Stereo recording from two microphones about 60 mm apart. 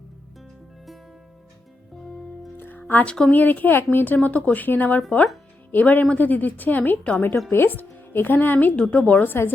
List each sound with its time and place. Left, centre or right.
2.6 s music: left
3.1 s speech: centre
3.3 s a woman's voice: left
8.6 s a woman's voice: left
9.2 s a woman's voice: left